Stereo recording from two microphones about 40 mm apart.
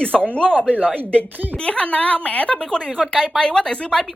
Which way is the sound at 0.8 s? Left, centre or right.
Right.